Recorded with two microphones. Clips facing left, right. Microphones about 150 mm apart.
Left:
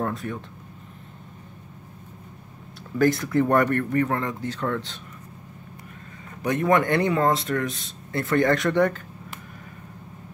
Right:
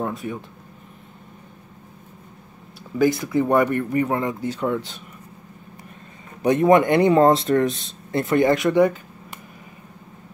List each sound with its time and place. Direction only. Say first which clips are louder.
0.0 s speech: right 1 dB; 5° right (ahead or behind)
3.0 s speech: right 1 dB; 5° right (ahead or behind)
6.4 s speech: right 6 dB; 20° right (ahead or behind)